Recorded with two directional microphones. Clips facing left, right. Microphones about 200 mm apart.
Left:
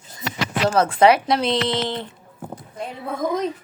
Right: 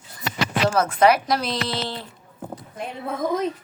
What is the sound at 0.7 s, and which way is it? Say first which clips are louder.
Speech: left 3 dB; 30° left (ahead or behind).